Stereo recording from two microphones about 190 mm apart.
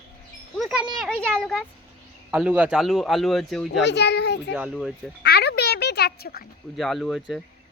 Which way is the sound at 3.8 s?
65° left (ahead or behind).